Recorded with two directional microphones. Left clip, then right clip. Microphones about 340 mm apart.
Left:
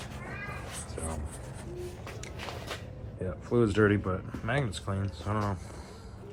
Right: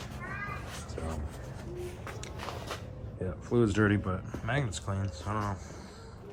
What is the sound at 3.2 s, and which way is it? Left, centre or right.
Speech, centre.